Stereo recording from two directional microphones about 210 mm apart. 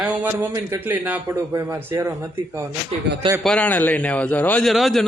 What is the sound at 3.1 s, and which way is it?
Speech, 55° right (ahead or behind).